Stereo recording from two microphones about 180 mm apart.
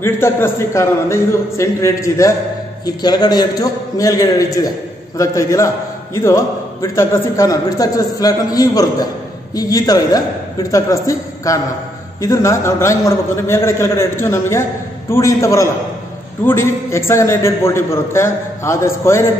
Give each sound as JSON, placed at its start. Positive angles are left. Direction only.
{"t": 0.0, "sound": "a man's voice", "side_deg": 15}